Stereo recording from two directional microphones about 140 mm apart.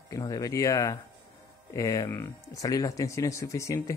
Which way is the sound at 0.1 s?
25° left (ahead or behind).